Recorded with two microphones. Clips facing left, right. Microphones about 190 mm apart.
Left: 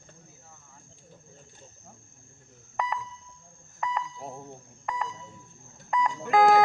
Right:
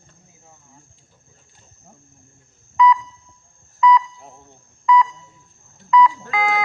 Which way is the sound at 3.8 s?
45° left (ahead or behind).